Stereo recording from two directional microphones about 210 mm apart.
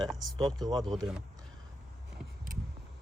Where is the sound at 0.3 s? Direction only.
20° right (ahead or behind).